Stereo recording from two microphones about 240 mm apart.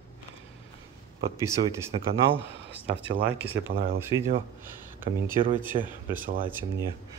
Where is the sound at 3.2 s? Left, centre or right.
Centre.